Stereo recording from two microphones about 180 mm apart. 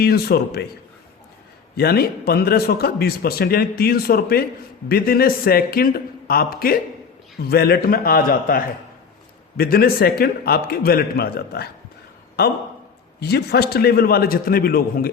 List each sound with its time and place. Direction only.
0.0 s a man's voice: 60° left (ahead or behind)
1.7 s a man's voice: 60° left (ahead or behind)